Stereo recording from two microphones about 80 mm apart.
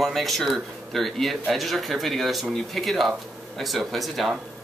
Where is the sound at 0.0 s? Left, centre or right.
Centre.